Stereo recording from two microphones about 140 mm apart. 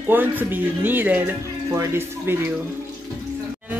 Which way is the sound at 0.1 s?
15° right (ahead or behind).